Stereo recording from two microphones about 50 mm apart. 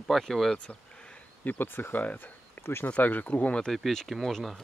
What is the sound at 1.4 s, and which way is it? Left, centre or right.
Speech, left.